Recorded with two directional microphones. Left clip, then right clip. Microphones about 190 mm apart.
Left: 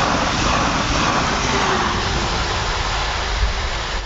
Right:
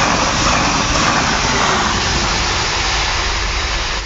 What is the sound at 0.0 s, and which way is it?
Vehicle, 60° right (ahead or behind).